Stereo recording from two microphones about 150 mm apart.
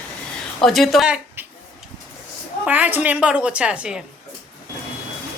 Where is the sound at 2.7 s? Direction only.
10° right (ahead or behind).